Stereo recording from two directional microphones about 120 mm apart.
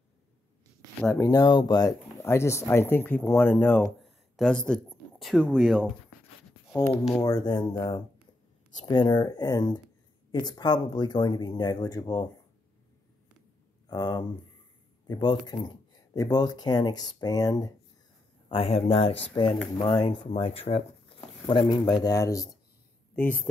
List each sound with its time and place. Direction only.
1.1 s speech: 30° left (ahead or behind)
1.4 s speech: 40° left (ahead or behind)
2.2 s speech: 25° left (ahead or behind)
4.4 s speech: 5° left (ahead or behind)
6.7 s speech: 20° left (ahead or behind)
7.2 s speech: 30° left (ahead or behind)
13.8 s speech: 35° left (ahead or behind)
18.5 s speech: 55° left (ahead or behind); by 22.5 s 30° left (ahead or behind)
23.1 s speech: 15° left (ahead or behind)